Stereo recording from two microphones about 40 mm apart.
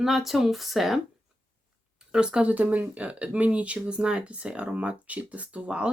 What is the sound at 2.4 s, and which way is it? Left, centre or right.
Speech, right.